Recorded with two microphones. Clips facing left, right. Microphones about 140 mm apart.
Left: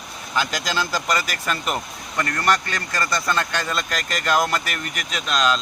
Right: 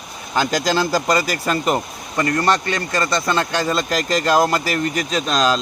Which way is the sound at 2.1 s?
20° right (ahead or behind).